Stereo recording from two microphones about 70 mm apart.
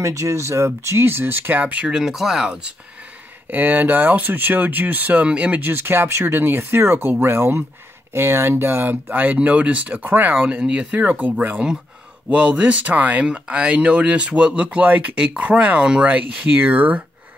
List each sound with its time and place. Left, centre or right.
0.0 s speech: right
1.9 s speech: centre
3.4 s speech: right
5.7 s speech: right